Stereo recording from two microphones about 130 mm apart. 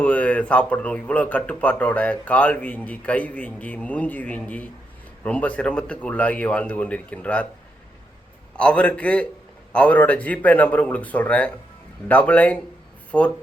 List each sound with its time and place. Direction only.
0.0 s speech: 10° left (ahead or behind)
8.5 s speech: 10° left (ahead or behind)